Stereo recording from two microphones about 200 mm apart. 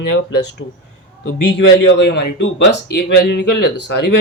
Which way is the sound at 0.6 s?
65° left (ahead or behind).